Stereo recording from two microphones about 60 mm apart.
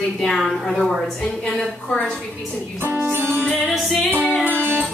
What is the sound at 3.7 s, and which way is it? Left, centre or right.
Music, centre.